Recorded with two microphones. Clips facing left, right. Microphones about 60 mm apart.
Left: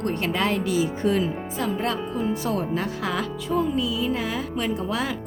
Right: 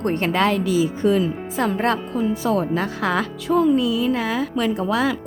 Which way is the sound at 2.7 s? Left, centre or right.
Right.